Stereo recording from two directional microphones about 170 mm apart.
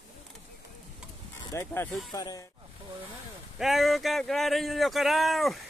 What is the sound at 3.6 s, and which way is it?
Speech, centre (ahead or behind).